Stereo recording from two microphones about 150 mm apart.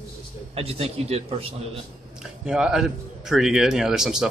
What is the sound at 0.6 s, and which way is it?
Speech, 40° right (ahead or behind).